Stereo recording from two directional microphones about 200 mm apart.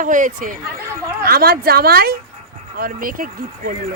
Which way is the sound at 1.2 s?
50° right (ahead or behind).